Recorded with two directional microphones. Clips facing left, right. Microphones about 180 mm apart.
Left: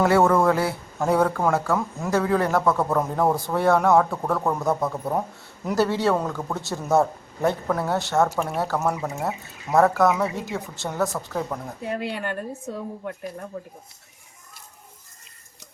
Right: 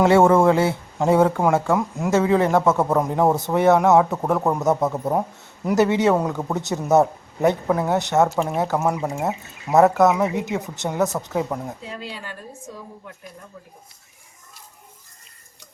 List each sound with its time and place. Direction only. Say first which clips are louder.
0.0 s speech: right 4 dB; 25° right (ahead or behind)
11.8 s speech: left 6 dB; 60° left (ahead or behind)